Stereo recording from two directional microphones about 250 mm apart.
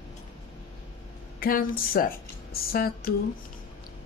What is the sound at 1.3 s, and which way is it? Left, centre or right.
A woman's voice, left.